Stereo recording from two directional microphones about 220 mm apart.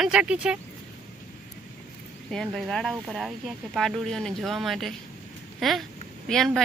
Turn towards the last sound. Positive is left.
turn(degrees=0)  # may be behind; listen again after turning